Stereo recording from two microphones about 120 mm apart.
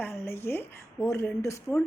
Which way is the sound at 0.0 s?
20° left (ahead or behind).